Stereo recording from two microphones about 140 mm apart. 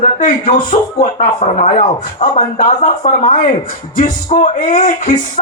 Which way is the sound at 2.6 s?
60° left (ahead or behind).